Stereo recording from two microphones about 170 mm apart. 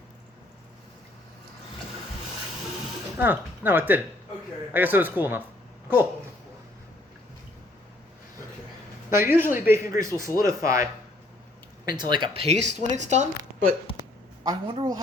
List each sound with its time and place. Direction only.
3.2 s speech: 10° right (ahead or behind)
9.0 s speech: 15° right (ahead or behind)
11.9 s speech: 25° right (ahead or behind); by 13.2 s 40° right (ahead or behind)
14.4 s speech: 25° right (ahead or behind)